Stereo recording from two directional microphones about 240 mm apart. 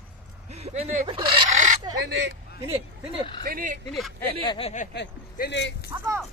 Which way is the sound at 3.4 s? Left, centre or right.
Right.